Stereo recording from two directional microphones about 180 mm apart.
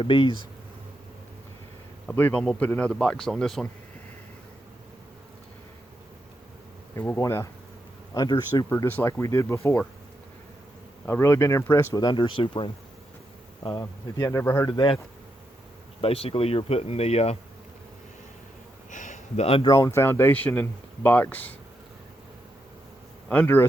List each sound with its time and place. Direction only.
0.0 s speech: 30° left (ahead or behind)
2.0 s speech: 10° left (ahead or behind)
6.9 s speech: 15° left (ahead or behind)
8.7 s speech: 10° left (ahead or behind)
11.0 s speech: 15° left (ahead or behind)
12.0 s speech: 25° left (ahead or behind)
14.7 s speech: 30° left (ahead or behind)
16.0 s speech: 30° left (ahead or behind)
18.9 s a sound: 45° left (ahead or behind)
19.6 s speech: 20° left (ahead or behind)
23.3 s speech: 10° left (ahead or behind)